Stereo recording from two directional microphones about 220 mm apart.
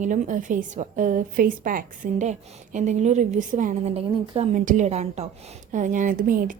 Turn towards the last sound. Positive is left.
turn(degrees=-40)  # may be behind; listen again after turning